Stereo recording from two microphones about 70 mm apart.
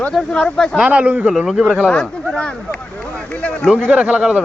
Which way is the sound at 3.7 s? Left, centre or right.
Centre.